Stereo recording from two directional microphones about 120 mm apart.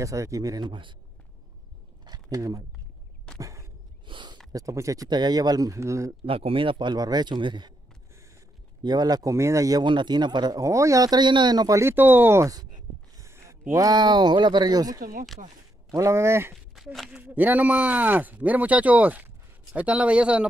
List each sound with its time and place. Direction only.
0.0 s speech: 25° right (ahead or behind)
2.3 s speech: 25° right (ahead or behind)
3.3 s a sound: 25° right (ahead or behind)
4.0 s a sound: 40° right (ahead or behind)
4.5 s speech: 30° right (ahead or behind)
6.2 s speech: 50° right (ahead or behind)
8.8 s speech: 35° right (ahead or behind)
9.8 s speech: 40° right (ahead or behind); by 16.5 s 20° right (ahead or behind)
16.7 s speech: centre (ahead or behind)
17.2 s speech: 15° right (ahead or behind)